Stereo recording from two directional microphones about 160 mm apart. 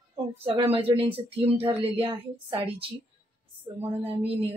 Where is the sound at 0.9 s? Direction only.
35° right (ahead or behind).